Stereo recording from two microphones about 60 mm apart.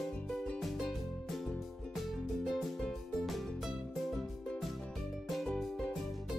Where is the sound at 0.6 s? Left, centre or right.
Centre.